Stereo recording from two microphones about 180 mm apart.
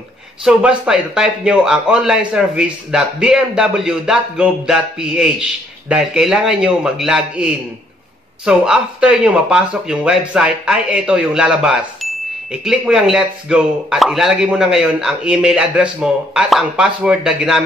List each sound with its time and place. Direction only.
0.4 s speech: 5° right (ahead or behind)